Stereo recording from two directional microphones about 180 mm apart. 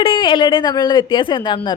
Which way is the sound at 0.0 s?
30° left (ahead or behind).